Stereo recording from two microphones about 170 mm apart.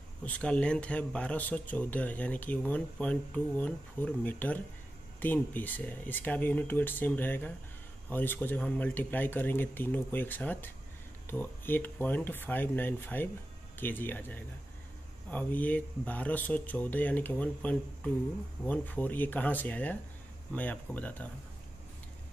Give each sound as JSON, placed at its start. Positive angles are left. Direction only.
{"t": 0.2, "sound": "speech", "side_deg": 5}